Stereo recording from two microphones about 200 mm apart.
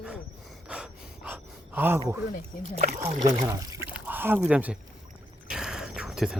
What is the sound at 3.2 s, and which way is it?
Speech, 15° right (ahead or behind).